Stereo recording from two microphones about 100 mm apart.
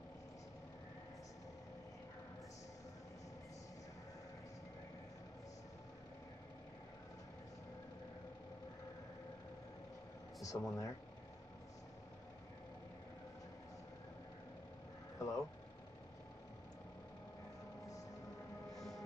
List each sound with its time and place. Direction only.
10.4 s speech: 35° left (ahead or behind)
15.1 s vehicle: 30° left (ahead or behind)
18.8 s music: 5° left (ahead or behind)